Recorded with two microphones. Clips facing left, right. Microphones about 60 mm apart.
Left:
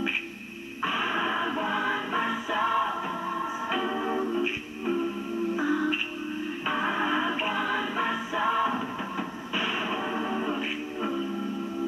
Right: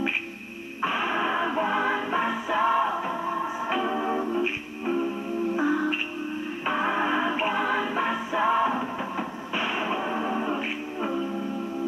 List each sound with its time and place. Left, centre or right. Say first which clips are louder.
0.8 s music: right 2 dB; centre